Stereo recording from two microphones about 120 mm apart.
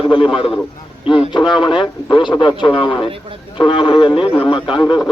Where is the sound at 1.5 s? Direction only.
5° right (ahead or behind).